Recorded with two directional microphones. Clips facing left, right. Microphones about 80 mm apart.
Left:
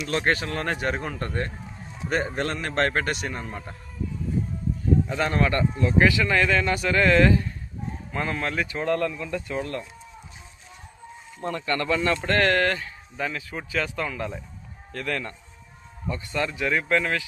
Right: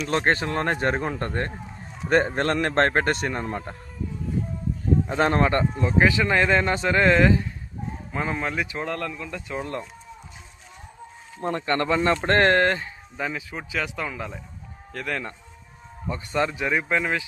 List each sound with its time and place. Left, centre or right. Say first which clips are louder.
0.1 s speech: right 2 dB; right
5.0 s speech: right 3 dB; right; by 8.8 s centre
8.8 s speech: left 4 dB; centre
11.4 s speech: right 2 dB; right
13.1 s speech: even; centre
14.9 s speech: even; centre